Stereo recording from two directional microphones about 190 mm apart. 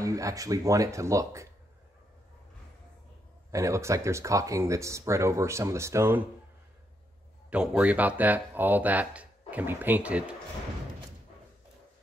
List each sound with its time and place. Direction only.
0.0 s speech: 15° right (ahead or behind)
3.5 s speech: 15° right (ahead or behind)
7.4 s speech: 5° right (ahead or behind)